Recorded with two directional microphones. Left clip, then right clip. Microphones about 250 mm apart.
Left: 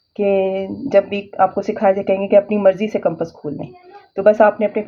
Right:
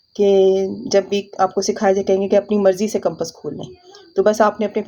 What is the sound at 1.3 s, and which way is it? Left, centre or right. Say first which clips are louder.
Speech: left 3 dB; right.